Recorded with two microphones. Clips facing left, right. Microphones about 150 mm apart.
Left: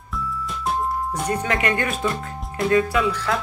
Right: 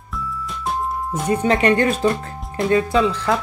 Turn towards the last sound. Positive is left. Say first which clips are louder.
# right 2 dB
turn(degrees=-25)  # may be behind; listen again after turning